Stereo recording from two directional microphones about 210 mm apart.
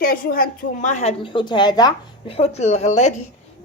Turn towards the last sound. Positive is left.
turn(degrees=35)  # may be behind; listen again after turning